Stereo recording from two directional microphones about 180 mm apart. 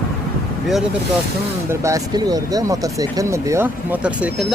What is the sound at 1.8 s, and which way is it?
Speech, 20° right (ahead or behind).